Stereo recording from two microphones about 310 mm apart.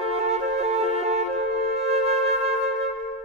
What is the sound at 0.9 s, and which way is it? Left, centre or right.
Music, centre.